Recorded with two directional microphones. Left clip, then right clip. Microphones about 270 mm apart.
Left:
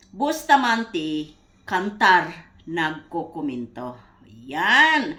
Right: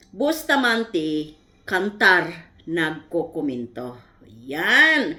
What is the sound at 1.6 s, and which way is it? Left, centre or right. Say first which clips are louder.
Speech: right 1 dB; left.